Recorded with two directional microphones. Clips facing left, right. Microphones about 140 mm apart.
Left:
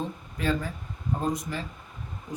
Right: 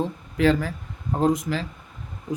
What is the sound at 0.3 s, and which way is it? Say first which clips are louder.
Speech: right 8 dB; 90° right.